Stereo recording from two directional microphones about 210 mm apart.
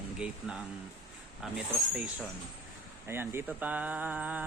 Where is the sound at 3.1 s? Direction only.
10° right (ahead or behind).